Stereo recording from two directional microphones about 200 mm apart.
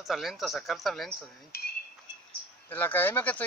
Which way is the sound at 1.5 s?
50° left (ahead or behind).